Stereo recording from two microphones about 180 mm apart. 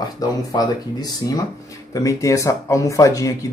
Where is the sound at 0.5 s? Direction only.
20° left (ahead or behind).